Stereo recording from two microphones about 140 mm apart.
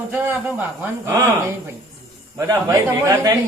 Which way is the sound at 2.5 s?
25° right (ahead or behind).